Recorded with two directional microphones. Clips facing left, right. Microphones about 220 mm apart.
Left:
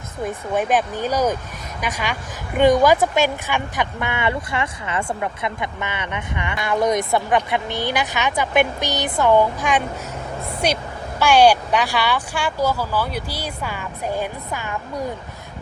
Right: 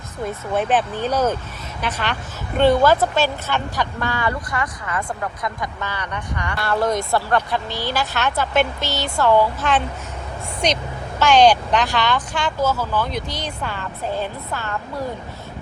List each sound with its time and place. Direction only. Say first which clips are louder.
0.5 s speech: even; 10° left (ahead or behind)